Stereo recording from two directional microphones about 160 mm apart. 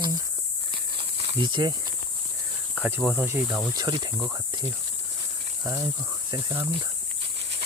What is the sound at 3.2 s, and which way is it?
Cricket, 10° right (ahead or behind).